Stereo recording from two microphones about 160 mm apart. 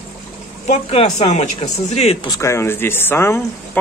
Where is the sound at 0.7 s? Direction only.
40° left (ahead or behind).